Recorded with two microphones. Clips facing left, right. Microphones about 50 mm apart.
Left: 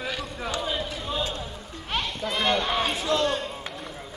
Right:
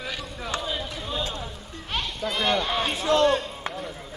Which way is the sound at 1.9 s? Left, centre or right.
Centre.